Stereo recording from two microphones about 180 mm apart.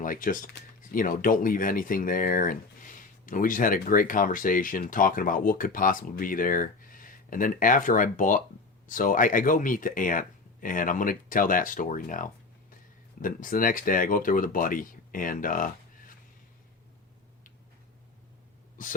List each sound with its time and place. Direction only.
0.0 s speech: 50° left (ahead or behind)
18.8 s speech: 50° left (ahead or behind)